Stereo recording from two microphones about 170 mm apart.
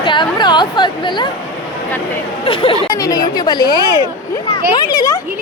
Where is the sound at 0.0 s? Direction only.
30° left (ahead or behind).